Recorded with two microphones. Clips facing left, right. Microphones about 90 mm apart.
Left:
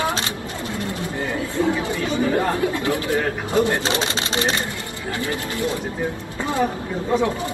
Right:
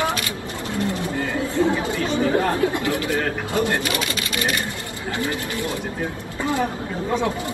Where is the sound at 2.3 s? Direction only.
20° left (ahead or behind).